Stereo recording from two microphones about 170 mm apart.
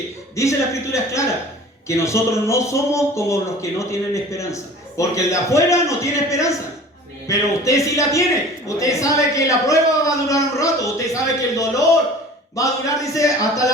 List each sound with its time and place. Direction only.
0.3 s a man's voice: 15° left (ahead or behind)